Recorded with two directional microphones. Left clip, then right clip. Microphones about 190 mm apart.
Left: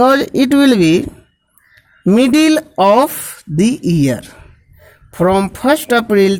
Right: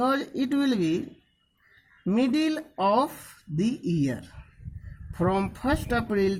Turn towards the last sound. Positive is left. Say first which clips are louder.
# left 14 dB
turn(degrees=40)  # may be behind; listen again after turning